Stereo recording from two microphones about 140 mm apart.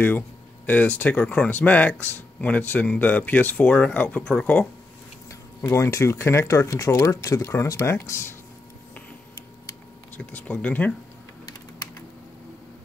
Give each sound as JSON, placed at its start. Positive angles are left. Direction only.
{"t": 0.7, "sound": "speech", "side_deg": 10}
{"t": 5.6, "sound": "speech", "side_deg": 20}
{"t": 10.1, "sound": "speech", "side_deg": 10}